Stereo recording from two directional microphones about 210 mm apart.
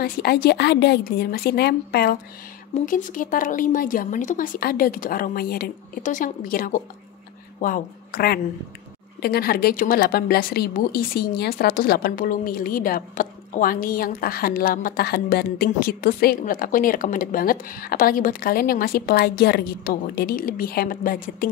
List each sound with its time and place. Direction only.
0.0 s a woman's voice: 45° left (ahead or behind)